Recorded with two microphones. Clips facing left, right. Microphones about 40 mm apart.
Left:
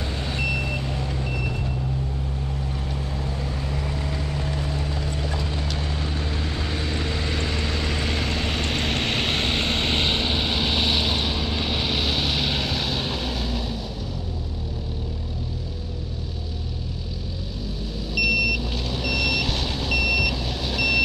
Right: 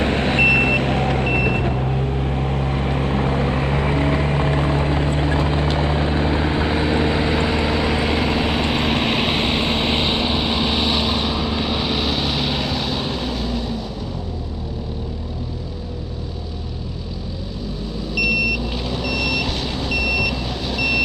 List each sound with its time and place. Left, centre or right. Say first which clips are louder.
0.0 s vehicle: right 11 dB; right; by 13.7 s centre
18.1 s vehicle: right 2 dB; centre